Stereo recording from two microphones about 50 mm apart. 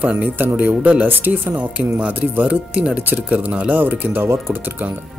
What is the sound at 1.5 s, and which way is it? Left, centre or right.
Speech, right.